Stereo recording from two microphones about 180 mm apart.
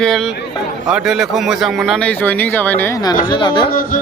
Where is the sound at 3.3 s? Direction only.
25° left (ahead or behind).